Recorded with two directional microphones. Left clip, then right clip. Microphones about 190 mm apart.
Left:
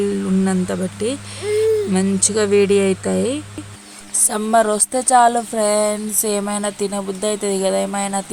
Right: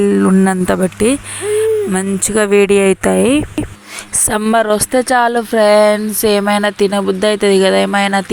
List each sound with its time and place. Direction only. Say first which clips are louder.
0.0 s speech: right 8 dB; 45° right (ahead or behind); by 2.0 s 25° right (ahead or behind)
2.3 s speech: right 5 dB; 40° right (ahead or behind); by 8.2 s 20° right (ahead or behind)